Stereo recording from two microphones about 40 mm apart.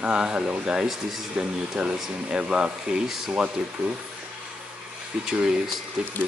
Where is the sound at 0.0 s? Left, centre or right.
Right.